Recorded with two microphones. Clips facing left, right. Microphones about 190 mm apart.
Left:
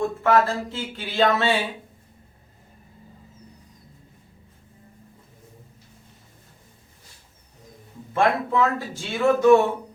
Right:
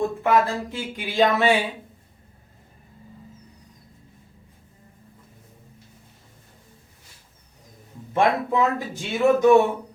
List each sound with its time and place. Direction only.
0.2 s speech: 15° right (ahead or behind)
8.1 s speech: 20° right (ahead or behind)